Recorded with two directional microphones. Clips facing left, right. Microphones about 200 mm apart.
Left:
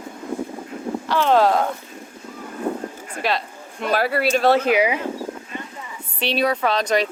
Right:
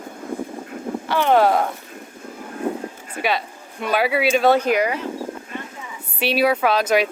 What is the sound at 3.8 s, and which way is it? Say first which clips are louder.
Speech: right 1 dB; centre (ahead or behind).